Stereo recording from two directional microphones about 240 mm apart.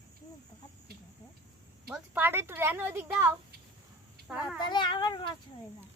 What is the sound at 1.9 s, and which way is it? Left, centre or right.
A woman's voice, centre.